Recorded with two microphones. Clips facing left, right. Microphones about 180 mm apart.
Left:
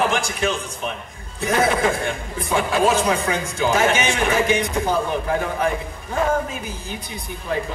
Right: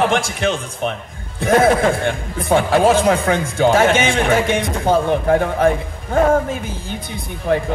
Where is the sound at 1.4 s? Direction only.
50° right (ahead or behind).